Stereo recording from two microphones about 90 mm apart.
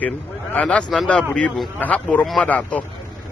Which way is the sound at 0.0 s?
15° left (ahead or behind).